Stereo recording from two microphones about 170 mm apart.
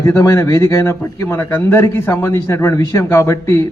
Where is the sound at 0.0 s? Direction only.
15° left (ahead or behind).